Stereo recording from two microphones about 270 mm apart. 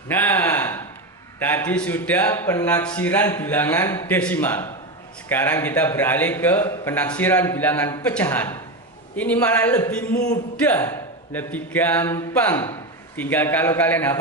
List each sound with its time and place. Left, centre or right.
0.1 s a sound: centre
1.4 s speech: centre
10.2 s speech: left
10.6 s speech: centre